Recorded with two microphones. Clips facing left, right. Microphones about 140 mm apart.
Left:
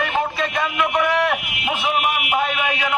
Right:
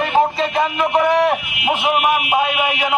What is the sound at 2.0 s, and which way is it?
Speech, 45° right (ahead or behind).